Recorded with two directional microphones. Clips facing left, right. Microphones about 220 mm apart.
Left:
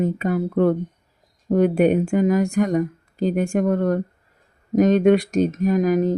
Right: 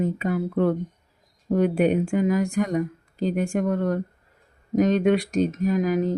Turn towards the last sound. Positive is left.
turn(degrees=45)  # may be behind; listen again after turning